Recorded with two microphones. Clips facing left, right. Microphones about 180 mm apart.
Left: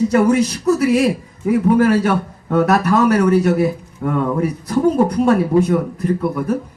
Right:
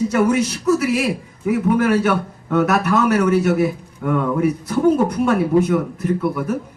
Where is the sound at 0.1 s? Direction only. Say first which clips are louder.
Left 3 dB; 35° left (ahead or behind).